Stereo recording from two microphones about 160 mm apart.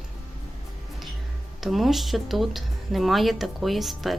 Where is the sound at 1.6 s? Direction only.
Centre (ahead or behind).